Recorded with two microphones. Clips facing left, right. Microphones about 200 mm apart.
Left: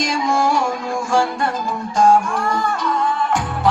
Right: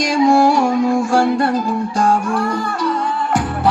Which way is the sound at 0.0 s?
40° right (ahead or behind).